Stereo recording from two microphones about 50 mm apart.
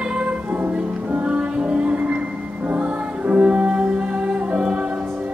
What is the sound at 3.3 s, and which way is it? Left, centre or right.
Music, right.